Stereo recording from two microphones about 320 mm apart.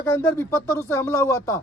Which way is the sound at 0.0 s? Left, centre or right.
Centre.